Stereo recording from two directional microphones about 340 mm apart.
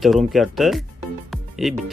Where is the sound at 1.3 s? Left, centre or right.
Centre.